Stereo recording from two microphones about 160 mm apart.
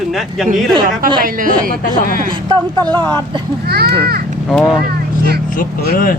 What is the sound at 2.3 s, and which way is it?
Speech, 25° right (ahead or behind).